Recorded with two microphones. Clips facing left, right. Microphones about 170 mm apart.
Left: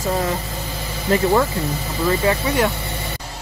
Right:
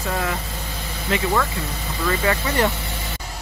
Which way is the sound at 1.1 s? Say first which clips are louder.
Left 6 dB; 40° left (ahead or behind).